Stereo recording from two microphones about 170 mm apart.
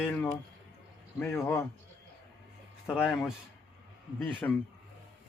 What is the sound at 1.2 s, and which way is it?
Speech, 15° left (ahead or behind).